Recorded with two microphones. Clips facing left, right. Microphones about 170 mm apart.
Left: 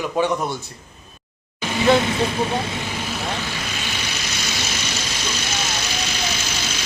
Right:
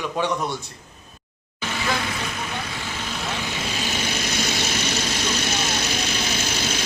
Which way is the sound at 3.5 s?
25° right (ahead or behind).